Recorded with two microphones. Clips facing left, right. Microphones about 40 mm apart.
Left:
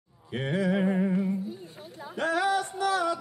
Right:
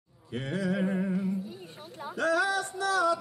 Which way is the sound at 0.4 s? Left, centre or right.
Left.